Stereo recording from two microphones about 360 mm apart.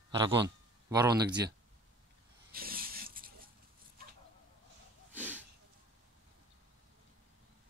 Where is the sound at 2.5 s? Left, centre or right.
Right.